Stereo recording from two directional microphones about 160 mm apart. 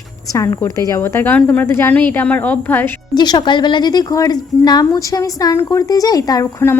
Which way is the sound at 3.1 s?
25° left (ahead or behind).